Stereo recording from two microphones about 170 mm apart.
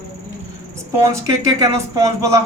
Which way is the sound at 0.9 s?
15° right (ahead or behind).